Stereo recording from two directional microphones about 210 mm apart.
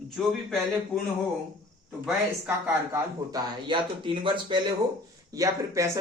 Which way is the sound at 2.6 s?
15° right (ahead or behind).